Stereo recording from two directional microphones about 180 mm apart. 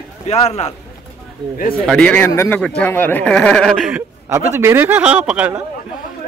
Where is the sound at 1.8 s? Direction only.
5° left (ahead or behind).